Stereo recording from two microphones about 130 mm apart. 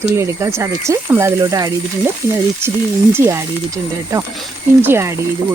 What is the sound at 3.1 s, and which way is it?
Speech, 20° right (ahead or behind).